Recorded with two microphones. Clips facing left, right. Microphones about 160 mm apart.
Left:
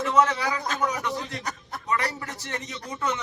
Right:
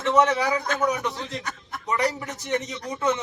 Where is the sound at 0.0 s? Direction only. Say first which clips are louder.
Right 2 dB; 20° right (ahead or behind).